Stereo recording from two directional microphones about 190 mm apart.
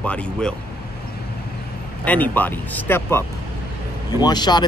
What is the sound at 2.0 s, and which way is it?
Speech, 10° left (ahead or behind).